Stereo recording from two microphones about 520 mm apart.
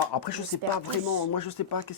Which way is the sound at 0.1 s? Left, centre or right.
Left.